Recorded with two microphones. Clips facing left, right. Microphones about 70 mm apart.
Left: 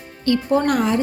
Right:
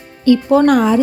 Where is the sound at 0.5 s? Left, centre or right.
Right.